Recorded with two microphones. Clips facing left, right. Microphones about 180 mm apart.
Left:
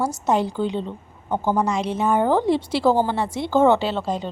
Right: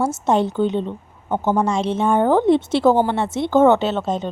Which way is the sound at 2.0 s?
10° left (ahead or behind).